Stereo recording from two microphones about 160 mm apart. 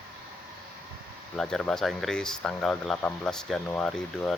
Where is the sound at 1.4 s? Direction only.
5° left (ahead or behind).